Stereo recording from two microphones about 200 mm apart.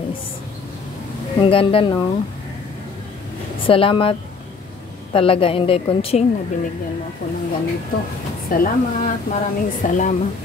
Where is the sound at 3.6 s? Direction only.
25° left (ahead or behind).